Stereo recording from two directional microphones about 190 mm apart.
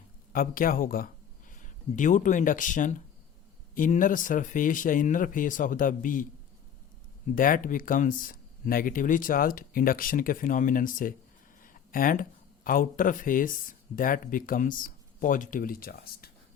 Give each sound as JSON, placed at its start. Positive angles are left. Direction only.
{"t": 0.3, "sound": "speech", "side_deg": 50}
{"t": 7.3, "sound": "speech", "side_deg": 45}